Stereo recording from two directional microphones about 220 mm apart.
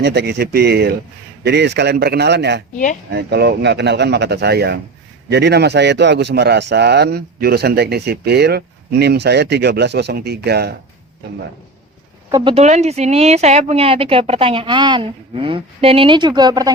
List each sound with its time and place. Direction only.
0.0 s a man's voice: 50° right (ahead or behind)
12.3 s speech: 25° right (ahead or behind)